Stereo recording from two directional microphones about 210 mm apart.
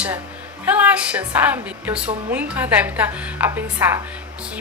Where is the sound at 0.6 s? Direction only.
5° right (ahead or behind).